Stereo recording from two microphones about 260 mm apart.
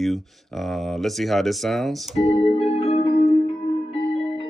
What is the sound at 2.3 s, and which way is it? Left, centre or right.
Music, left.